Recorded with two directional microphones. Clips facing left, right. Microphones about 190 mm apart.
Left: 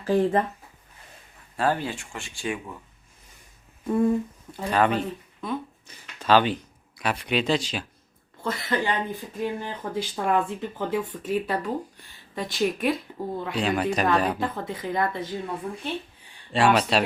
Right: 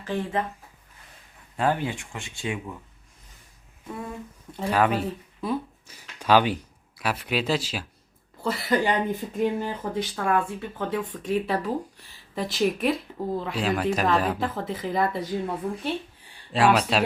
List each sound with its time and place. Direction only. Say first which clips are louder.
0.0 s speech: left 6 dB; 40° left (ahead or behind)
1.5 s speech: even; 15° right (ahead or behind)
4.5 s speech: even; 5° right (ahead or behind)
10.2 s speech: left 2 dB; 20° left (ahead or behind); by 17.0 s centre (ahead or behind)